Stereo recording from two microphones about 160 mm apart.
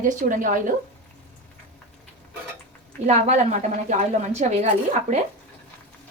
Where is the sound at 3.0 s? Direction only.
45° right (ahead or behind).